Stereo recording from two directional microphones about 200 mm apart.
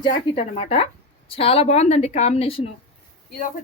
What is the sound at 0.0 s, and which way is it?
A woman's voice, 30° left (ahead or behind).